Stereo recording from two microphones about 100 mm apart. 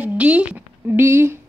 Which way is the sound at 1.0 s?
25° right (ahead or behind).